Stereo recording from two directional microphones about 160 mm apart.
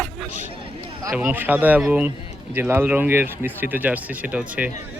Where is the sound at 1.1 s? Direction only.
10° right (ahead or behind).